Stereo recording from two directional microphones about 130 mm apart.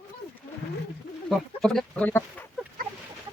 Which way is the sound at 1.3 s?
5° left (ahead or behind).